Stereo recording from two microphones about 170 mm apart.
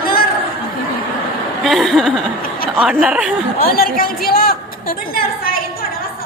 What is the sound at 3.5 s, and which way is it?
Speech, 60° left (ahead or behind).